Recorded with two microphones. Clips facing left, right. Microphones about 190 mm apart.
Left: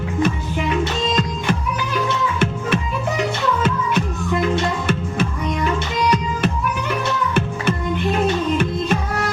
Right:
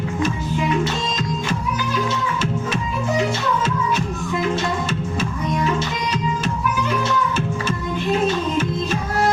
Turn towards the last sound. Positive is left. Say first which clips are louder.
# left 2 dB
turn(degrees=60)  # may be behind; listen again after turning